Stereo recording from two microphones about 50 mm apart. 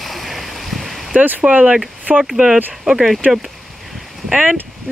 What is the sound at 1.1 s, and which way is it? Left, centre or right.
Speech, right.